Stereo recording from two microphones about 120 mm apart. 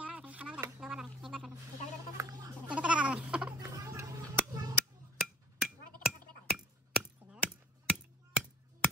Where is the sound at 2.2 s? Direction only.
30° right (ahead or behind).